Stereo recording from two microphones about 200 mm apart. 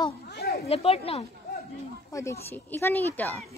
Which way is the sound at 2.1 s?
15° left (ahead or behind).